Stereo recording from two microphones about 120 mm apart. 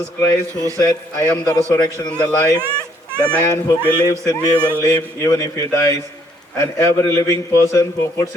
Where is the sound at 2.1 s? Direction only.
10° left (ahead or behind).